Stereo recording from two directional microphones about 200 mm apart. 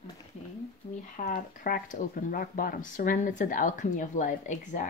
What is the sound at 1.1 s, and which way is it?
A woman's voice, 40° left (ahead or behind).